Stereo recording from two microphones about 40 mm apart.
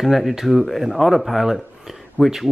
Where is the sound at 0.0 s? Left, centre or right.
Centre.